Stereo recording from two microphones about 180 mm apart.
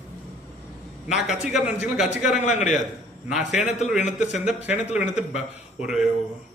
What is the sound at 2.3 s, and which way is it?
Speech, 40° left (ahead or behind).